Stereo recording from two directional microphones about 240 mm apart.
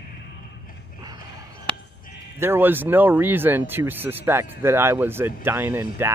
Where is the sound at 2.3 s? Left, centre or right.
Centre.